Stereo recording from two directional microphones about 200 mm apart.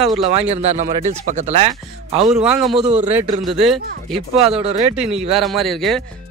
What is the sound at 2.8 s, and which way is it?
Speech, 35° right (ahead or behind).